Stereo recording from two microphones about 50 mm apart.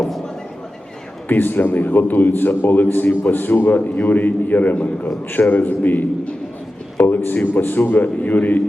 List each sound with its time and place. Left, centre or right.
1.3 s a man's voice: left